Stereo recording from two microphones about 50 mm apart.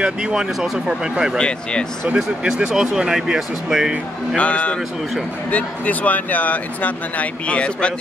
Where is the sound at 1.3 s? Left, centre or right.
Centre.